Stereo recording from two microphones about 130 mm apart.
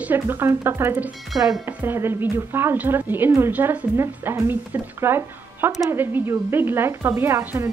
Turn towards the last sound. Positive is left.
turn(degrees=-20)  # may be behind; listen again after turning